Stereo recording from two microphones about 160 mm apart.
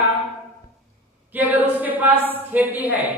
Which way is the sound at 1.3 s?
10° right (ahead or behind).